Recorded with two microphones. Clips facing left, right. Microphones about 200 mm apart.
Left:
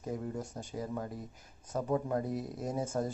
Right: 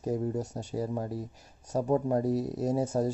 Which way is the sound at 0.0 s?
40° right (ahead or behind).